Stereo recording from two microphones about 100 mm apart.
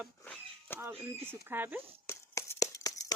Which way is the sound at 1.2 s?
20° right (ahead or behind).